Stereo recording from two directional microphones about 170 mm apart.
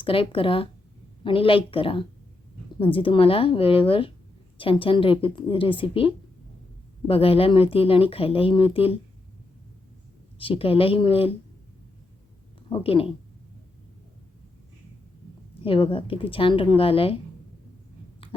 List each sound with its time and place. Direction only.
0.0 s speech: 30° left (ahead or behind)
10.3 s speech: 30° left (ahead or behind)
12.7 s speech: 35° left (ahead or behind)
15.6 s speech: 30° left (ahead or behind)
18.2 s a sound: 30° left (ahead or behind)